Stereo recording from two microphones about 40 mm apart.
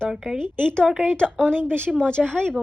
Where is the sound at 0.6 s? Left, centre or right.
Left.